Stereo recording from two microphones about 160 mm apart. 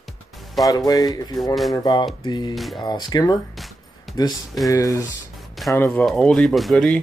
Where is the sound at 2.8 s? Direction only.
25° left (ahead or behind).